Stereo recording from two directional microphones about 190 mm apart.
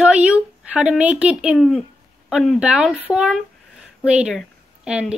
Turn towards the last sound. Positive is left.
turn(degrees=-5)  # may be behind; listen again after turning